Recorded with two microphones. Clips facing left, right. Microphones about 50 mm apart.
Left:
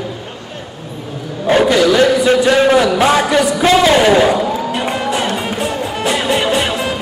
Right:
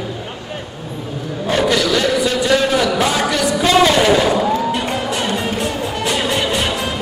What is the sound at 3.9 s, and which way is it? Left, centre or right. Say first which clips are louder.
Speech: left 3 dB; centre.